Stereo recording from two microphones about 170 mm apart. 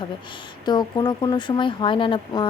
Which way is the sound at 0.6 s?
25° left (ahead or behind).